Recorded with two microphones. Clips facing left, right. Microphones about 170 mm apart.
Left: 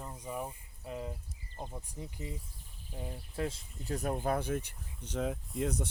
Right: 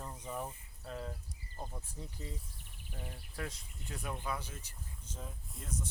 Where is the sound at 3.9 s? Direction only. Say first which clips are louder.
Left 8 dB; 45° left (ahead or behind).